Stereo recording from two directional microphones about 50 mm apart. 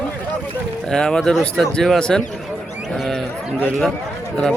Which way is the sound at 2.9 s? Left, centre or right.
Centre.